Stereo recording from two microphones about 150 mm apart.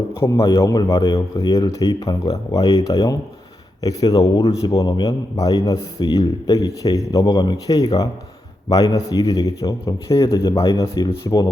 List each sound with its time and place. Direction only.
0.2 s a man's voice: 20° left (ahead or behind)